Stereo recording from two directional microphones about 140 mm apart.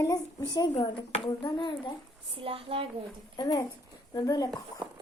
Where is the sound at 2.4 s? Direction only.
40° right (ahead or behind).